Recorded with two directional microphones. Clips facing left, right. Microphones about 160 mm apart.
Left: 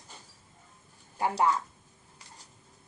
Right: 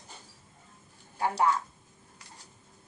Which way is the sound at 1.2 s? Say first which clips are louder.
Even; 15° left (ahead or behind).